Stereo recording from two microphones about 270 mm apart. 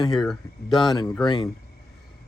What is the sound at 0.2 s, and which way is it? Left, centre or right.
Speech, centre.